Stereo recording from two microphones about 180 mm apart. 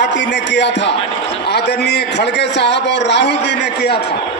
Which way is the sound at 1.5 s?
65° left (ahead or behind).